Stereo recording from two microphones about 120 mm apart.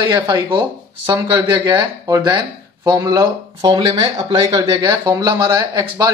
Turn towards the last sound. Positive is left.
turn(degrees=-40)  # may be behind; listen again after turning